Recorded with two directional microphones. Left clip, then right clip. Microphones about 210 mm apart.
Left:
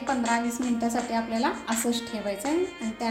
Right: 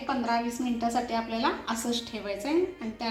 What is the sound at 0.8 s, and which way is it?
A woman's voice, 50° left (ahead or behind).